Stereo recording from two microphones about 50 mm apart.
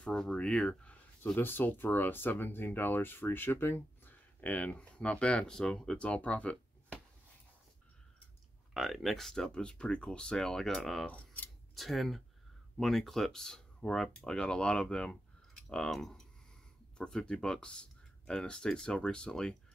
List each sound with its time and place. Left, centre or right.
0.0 s speech: centre
1.3 s speech: left; by 5.9 s centre
5.9 s speech: left
8.7 s speech: centre
9.5 s speech: left